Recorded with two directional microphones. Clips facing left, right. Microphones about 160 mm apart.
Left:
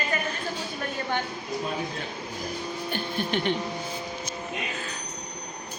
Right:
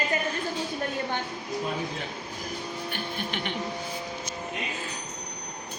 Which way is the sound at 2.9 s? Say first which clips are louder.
Left 7 dB; 35° left (ahead or behind).